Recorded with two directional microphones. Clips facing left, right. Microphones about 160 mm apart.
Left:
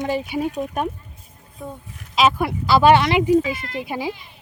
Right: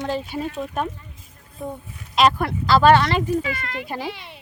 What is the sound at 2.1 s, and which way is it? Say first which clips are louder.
Speech: even; 5° left (ahead or behind).